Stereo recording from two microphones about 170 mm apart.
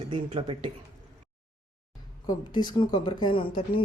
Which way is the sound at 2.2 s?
25° left (ahead or behind).